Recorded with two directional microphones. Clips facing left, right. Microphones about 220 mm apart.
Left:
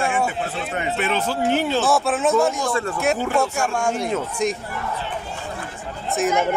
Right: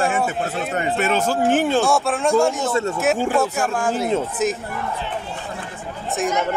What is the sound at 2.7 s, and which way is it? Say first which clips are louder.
Speech: right 2 dB; 25° right (ahead or behind).